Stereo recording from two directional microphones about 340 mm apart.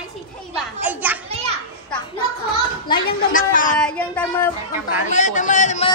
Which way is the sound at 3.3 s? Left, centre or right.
Left.